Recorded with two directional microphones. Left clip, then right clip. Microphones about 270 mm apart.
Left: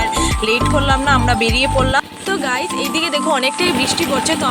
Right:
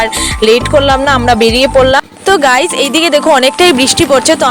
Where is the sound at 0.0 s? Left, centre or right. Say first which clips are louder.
Right 7 dB; right.